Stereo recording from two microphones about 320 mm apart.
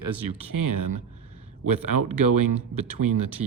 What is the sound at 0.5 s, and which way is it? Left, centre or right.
Speech, right.